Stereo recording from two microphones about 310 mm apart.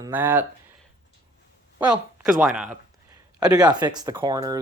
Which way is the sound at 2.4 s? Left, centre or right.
Centre.